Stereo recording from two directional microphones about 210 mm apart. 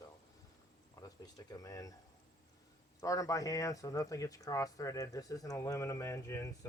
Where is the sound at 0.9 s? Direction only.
15° left (ahead or behind).